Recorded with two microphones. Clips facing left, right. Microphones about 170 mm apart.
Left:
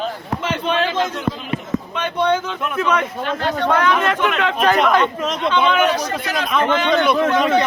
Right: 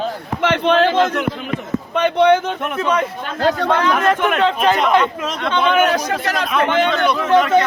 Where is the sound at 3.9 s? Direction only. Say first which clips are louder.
Right 2 dB; 45° right (ahead or behind).